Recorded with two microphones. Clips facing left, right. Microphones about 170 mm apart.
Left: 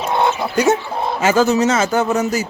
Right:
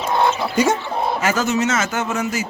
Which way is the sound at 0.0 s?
20° left (ahead or behind).